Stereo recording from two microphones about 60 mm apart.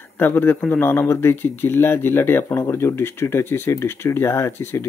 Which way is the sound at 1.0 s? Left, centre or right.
Left.